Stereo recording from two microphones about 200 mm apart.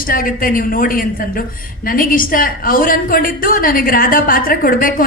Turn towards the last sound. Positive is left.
turn(degrees=45)  # may be behind; listen again after turning